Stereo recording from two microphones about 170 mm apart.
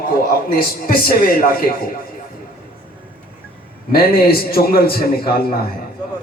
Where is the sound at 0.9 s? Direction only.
60° left (ahead or behind).